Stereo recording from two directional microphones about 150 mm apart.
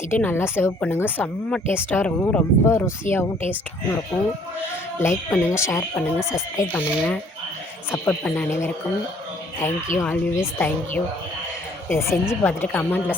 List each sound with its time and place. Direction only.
0.1 s a woman's voice: 15° left (ahead or behind)
4.9 s a woman's voice: 15° left (ahead or behind)
9.6 s speech: 55° left (ahead or behind)
10.0 s a woman's voice: 15° left (ahead or behind)